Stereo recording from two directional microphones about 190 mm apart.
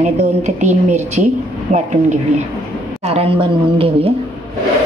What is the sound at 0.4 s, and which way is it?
A woman's voice, 40° right (ahead or behind).